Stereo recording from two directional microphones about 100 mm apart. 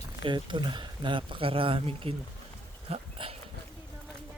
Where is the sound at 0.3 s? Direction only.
55° right (ahead or behind).